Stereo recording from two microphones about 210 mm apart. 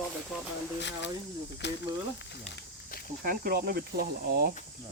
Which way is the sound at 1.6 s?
55° left (ahead or behind).